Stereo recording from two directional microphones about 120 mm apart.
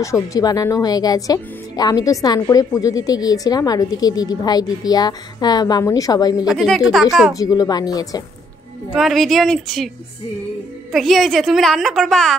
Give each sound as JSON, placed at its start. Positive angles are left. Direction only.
{"t": 0.0, "sound": "speech", "side_deg": 25}
{"t": 6.4, "sound": "a woman's voice", "side_deg": 0}
{"t": 7.3, "sound": "speech", "side_deg": 30}
{"t": 8.9, "sound": "a woman's voice", "side_deg": 0}
{"t": 10.9, "sound": "a woman's voice", "side_deg": 0}